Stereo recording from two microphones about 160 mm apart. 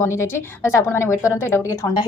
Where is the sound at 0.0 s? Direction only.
15° left (ahead or behind).